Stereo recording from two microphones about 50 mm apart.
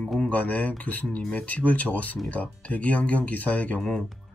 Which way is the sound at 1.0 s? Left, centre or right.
Centre.